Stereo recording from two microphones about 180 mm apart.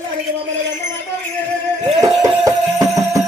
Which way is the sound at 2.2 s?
20° right (ahead or behind).